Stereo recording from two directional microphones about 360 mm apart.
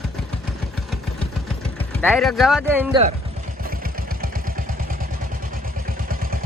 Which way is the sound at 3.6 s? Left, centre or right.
Right.